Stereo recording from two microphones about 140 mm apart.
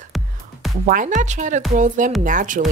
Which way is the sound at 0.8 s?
65° right (ahead or behind).